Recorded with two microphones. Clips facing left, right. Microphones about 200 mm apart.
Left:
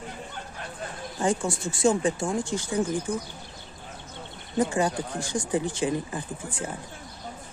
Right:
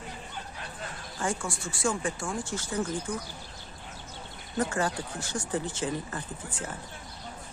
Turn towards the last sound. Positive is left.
turn(degrees=15)  # may be behind; listen again after turning